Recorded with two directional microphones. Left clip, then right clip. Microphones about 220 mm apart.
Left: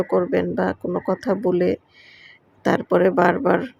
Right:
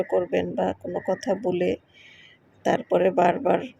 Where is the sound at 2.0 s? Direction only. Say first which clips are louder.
Left 4 dB; 30° left (ahead or behind).